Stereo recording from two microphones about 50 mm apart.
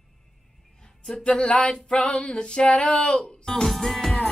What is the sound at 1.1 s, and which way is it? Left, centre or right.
Speech, left.